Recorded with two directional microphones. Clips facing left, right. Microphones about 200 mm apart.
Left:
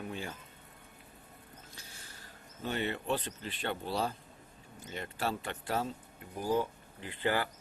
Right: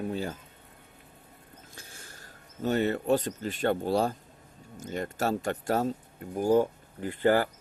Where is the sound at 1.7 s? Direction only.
50° right (ahead or behind).